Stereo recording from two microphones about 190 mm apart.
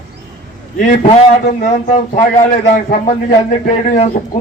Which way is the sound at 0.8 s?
40° left (ahead or behind).